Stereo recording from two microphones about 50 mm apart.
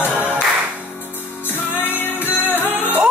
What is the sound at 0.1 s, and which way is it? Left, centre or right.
Music, right.